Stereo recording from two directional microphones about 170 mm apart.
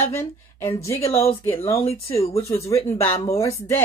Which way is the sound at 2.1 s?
35° left (ahead or behind).